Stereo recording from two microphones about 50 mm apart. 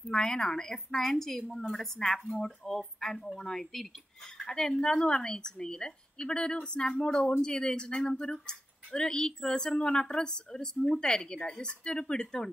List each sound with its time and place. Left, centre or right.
0.1 s a woman's voice: centre